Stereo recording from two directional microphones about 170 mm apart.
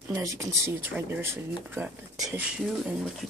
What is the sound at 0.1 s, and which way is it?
Speech, 15° right (ahead or behind).